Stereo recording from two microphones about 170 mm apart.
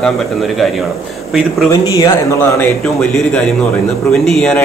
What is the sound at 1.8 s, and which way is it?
Speech, 20° left (ahead or behind).